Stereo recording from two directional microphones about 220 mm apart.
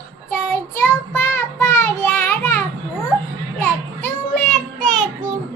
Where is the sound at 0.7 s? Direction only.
10° left (ahead or behind).